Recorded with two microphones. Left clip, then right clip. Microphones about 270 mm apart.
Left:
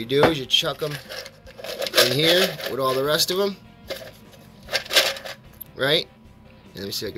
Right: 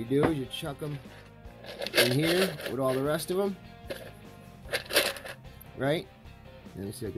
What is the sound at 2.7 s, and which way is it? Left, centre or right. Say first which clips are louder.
Speech: left 8 dB; right.